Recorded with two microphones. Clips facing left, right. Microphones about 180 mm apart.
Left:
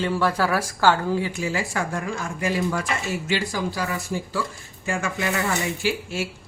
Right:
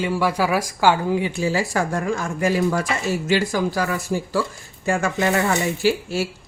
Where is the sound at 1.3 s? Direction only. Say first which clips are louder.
Right 5 dB; 35° right (ahead or behind); by 3.8 s 50° right (ahead or behind).